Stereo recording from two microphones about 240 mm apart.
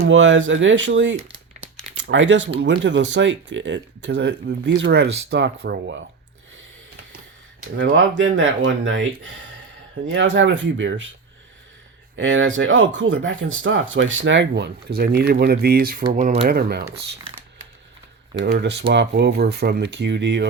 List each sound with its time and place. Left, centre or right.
0.0 s speech: right
7.8 s speech: right
12.1 s speech: right
16.4 s speech: right
18.3 s speech: right